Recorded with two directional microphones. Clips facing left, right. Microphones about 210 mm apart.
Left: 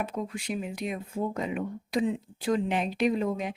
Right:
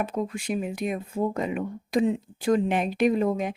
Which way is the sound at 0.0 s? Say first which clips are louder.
Right 4 dB; 45° right (ahead or behind).